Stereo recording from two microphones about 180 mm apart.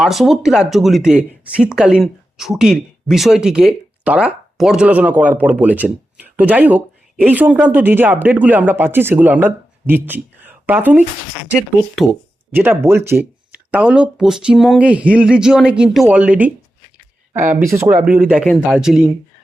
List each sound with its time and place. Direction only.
0.0 s speech: centre (ahead or behind)
12.5 s speech: 10° right (ahead or behind)
17.3 s speech: 45° right (ahead or behind)
17.6 s speech: 15° right (ahead or behind)